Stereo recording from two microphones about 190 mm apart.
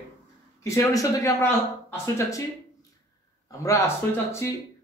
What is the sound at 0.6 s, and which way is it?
Speech, 15° left (ahead or behind).